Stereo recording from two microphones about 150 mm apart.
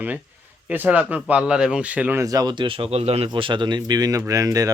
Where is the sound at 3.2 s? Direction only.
35° right (ahead or behind).